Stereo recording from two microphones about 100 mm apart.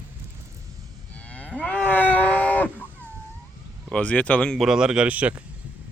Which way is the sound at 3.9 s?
15° left (ahead or behind).